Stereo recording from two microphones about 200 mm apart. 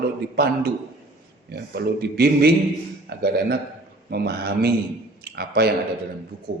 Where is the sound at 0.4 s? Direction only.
50° right (ahead or behind).